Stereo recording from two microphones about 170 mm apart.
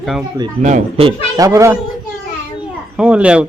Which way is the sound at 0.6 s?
45° right (ahead or behind).